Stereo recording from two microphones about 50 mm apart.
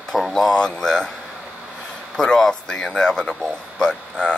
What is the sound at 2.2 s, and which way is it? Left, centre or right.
Speech, centre.